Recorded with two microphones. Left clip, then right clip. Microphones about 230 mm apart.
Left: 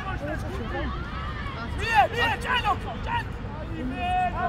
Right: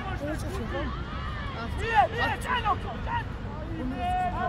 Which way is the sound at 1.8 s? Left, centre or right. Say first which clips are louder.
Left 2 dB; left.